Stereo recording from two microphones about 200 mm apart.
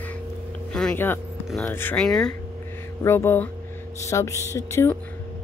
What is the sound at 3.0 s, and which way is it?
Speech, 15° left (ahead or behind).